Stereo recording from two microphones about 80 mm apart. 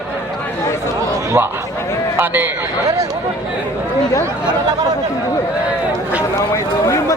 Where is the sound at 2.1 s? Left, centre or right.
Right.